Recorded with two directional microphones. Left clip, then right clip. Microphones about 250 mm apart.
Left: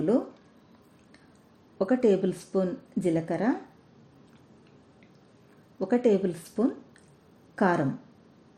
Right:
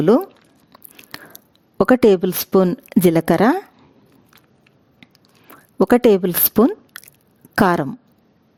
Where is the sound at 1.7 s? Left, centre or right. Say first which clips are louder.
Right 11 dB; right.